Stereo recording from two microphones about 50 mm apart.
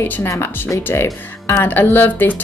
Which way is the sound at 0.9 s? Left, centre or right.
Left.